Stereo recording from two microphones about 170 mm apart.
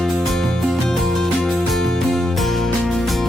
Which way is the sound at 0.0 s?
Centre (ahead or behind).